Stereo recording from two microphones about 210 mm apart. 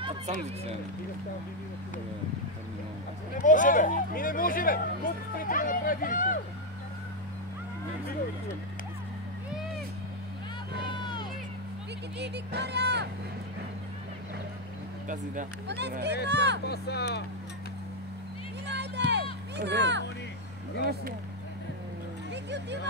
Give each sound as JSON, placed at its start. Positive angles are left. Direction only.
{"t": 3.3, "sound": "speech", "side_deg": 40}
{"t": 11.0, "sound": "music", "side_deg": 20}
{"t": 12.2, "sound": "speech", "side_deg": -55}
{"t": 15.7, "sound": "speech", "side_deg": -55}
{"t": 16.6, "sound": "speech", "side_deg": 50}
{"t": 18.7, "sound": "music", "side_deg": -55}
{"t": 19.5, "sound": "speech", "side_deg": -55}
{"t": 22.3, "sound": "a sound", "side_deg": -55}